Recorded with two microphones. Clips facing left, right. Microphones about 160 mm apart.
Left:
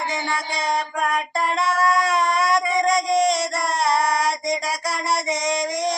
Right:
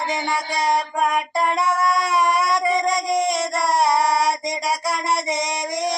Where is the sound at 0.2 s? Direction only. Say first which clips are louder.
Right 3 dB; 20° right (ahead or behind).